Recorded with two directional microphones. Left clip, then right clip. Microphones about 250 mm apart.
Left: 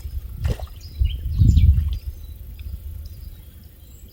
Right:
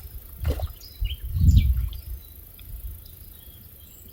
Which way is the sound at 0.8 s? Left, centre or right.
Centre.